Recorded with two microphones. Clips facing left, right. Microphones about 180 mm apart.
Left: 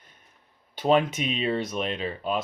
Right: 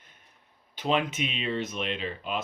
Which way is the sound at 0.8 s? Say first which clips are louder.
Left 5 dB; 40° left (ahead or behind).